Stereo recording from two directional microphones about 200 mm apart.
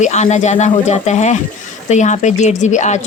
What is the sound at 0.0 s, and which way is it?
Speech, 35° left (ahead or behind).